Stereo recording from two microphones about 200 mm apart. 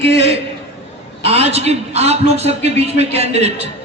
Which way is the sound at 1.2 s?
30° right (ahead or behind).